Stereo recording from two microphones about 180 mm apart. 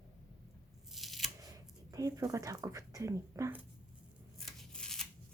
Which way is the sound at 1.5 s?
20° right (ahead or behind).